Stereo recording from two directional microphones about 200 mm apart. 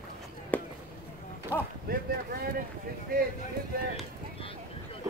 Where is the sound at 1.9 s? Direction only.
50° right (ahead or behind).